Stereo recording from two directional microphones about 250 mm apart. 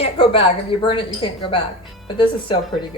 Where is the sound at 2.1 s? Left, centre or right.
Centre.